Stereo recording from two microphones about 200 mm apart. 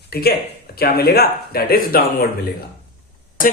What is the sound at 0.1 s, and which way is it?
A man's voice, 50° left (ahead or behind).